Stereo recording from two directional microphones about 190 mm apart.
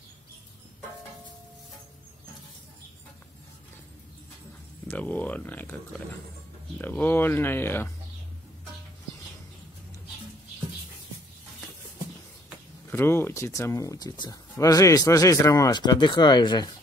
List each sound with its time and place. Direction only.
4.8 s speech: 10° left (ahead or behind)
12.9 s speech: 10° left (ahead or behind)